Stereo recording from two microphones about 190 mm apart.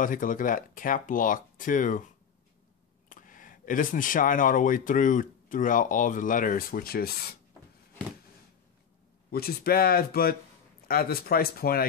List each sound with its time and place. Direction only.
0.0 s speech: 45° left (ahead or behind)
3.1 s speech: 45° left (ahead or behind)
9.3 s speech: 55° left (ahead or behind)